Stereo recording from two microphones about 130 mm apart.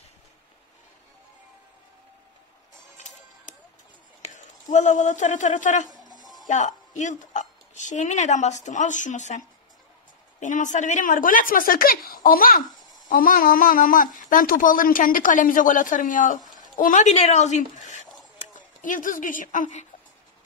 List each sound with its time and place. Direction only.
3.0 s music: 65° left (ahead or behind)
4.3 s speech: 70° left (ahead or behind)
5.9 s music: 30° left (ahead or behind)
6.4 s speech: 70° left (ahead or behind)
10.4 s speech: 75° left (ahead or behind)
16.5 s speech: 90° left; by 18.0 s 70° left (ahead or behind)
18.8 s speech: 90° left; by 19.9 s 75° left (ahead or behind)